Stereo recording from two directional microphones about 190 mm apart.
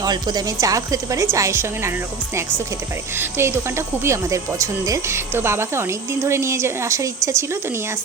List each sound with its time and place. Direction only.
0.0 s speech: 20° right (ahead or behind)